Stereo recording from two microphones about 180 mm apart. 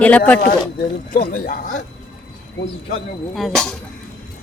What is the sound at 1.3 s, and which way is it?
Speech, 50° left (ahead or behind).